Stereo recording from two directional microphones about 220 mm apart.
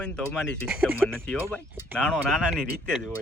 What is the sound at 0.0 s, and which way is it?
A man's voice, 5° left (ahead or behind).